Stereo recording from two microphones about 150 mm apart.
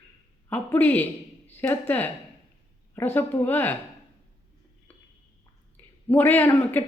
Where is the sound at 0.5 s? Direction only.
10° left (ahead or behind).